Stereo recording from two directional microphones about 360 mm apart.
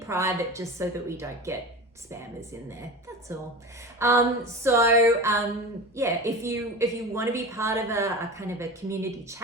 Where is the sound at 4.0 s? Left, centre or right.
Centre.